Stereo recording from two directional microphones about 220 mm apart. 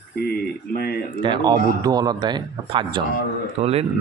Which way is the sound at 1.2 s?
20° right (ahead or behind).